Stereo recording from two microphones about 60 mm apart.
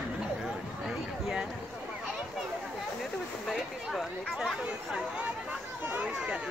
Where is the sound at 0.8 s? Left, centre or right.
Centre.